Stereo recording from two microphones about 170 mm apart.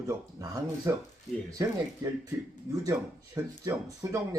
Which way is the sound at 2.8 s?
20° right (ahead or behind).